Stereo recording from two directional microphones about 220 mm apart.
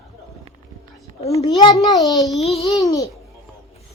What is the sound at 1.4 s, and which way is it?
Speech, 20° left (ahead or behind).